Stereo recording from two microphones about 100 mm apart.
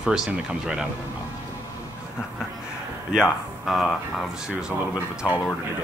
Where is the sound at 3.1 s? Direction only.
5° right (ahead or behind).